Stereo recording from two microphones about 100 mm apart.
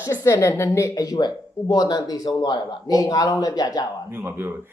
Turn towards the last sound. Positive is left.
turn(degrees=-25)  # may be behind; listen again after turning